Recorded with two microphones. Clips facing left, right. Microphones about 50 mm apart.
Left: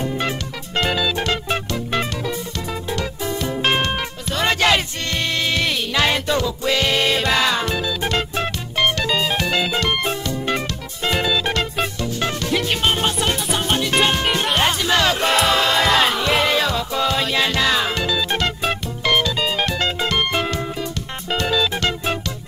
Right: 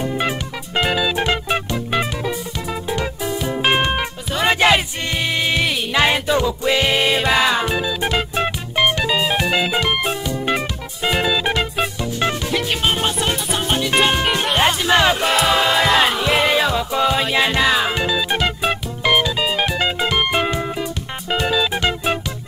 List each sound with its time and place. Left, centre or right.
0.0 s music: centre
12.5 s music: centre